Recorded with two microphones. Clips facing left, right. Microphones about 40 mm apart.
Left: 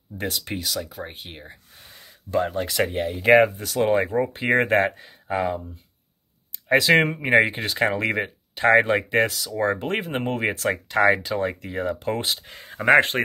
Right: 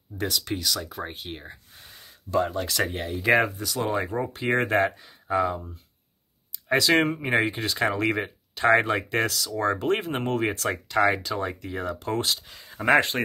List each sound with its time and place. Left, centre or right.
0.5 s speech: left
0.8 s speech: centre
1.1 s speech: centre
2.3 s speech: left
3.1 s speech: left
6.7 s speech: left
12.4 s speech: left
13.1 s speech: centre